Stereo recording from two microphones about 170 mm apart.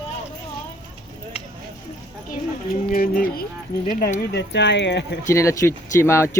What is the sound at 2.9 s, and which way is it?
Speech, 55° left (ahead or behind).